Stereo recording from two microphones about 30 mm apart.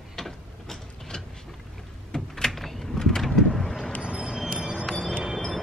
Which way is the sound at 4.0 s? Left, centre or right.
Right.